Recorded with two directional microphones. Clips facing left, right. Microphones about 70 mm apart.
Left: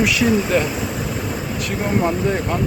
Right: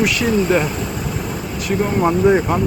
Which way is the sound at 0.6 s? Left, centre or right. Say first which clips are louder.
Right 1 dB; centre.